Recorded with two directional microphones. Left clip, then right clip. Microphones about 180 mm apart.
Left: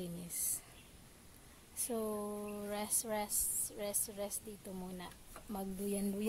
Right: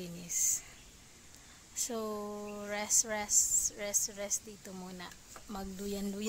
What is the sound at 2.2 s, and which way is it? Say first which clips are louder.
Speech: right 2 dB; 20° right (ahead or behind).